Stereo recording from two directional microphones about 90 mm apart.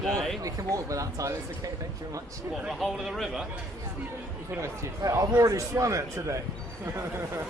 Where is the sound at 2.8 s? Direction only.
Centre (ahead or behind).